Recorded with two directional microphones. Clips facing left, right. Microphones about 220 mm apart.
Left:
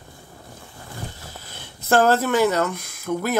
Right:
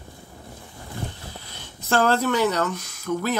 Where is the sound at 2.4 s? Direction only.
10° left (ahead or behind).